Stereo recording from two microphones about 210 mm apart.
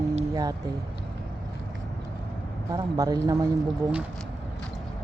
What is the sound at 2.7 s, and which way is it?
Speech, 15° right (ahead or behind).